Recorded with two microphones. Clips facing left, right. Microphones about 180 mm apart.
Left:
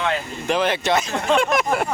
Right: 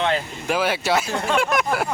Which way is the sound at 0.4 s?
5° right (ahead or behind).